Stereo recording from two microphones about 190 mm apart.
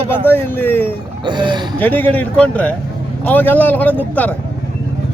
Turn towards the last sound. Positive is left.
turn(degrees=10)  # may be behind; listen again after turning